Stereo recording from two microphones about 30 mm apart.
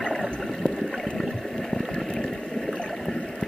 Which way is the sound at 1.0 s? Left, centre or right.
Centre.